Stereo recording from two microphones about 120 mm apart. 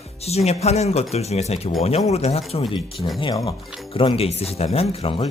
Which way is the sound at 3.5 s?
50° left (ahead or behind).